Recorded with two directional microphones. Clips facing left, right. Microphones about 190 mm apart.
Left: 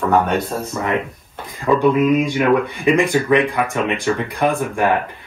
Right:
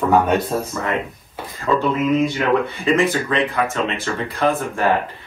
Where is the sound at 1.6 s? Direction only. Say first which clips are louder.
Left 4 dB; 15° left (ahead or behind).